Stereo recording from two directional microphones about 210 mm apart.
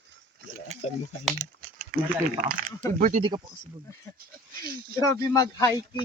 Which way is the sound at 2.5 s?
40° right (ahead or behind).